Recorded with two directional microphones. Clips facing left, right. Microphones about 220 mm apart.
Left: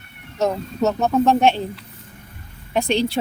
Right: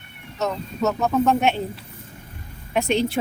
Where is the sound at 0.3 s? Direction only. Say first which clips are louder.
Left 4 dB; 30° left (ahead or behind).